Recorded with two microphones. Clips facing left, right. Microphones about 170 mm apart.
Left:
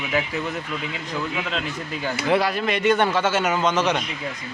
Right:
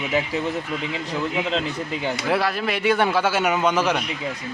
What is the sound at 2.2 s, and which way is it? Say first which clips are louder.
Speech: left 3 dB; centre (ahead or behind).